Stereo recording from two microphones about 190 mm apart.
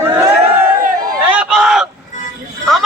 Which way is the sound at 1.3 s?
5° right (ahead or behind).